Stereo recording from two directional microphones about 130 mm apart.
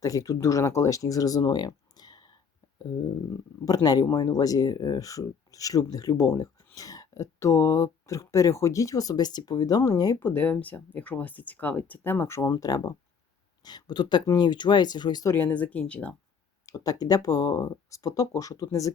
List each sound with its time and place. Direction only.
0.0 s speech: 25° left (ahead or behind)
3.8 s speech: 30° left (ahead or behind)
10.2 s speech: 15° left (ahead or behind); by 15.4 s 30° left (ahead or behind)
15.4 s speech: 15° left (ahead or behind)
16.6 s speech: 30° left (ahead or behind)